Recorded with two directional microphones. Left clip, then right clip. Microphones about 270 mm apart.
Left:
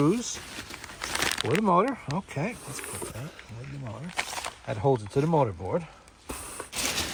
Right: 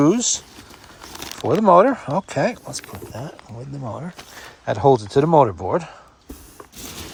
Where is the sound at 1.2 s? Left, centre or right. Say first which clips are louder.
Right 5 dB; centre.